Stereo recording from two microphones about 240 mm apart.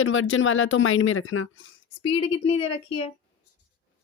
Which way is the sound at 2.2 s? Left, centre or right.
Left.